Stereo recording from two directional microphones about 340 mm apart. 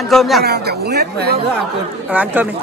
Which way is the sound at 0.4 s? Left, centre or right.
Right.